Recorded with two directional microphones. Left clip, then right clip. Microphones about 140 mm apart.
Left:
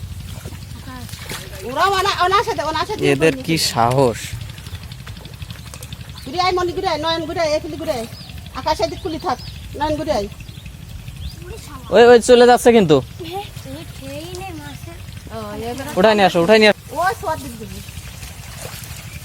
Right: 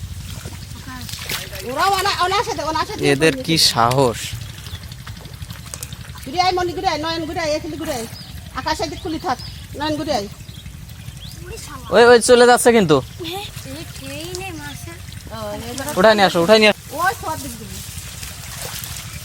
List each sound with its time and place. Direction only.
1.3 s splash: 5° right (ahead or behind)
2.0 s speech: 10° left (ahead or behind)
6.3 s speech: 15° left (ahead or behind)
11.9 s speech: 20° left (ahead or behind)
13.2 s speech: centre (ahead or behind)
16.0 s speech: 20° left (ahead or behind)